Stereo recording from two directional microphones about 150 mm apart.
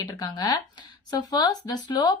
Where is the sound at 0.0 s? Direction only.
25° left (ahead or behind).